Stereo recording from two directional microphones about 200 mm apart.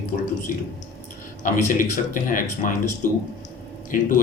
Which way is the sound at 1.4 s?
40° left (ahead or behind).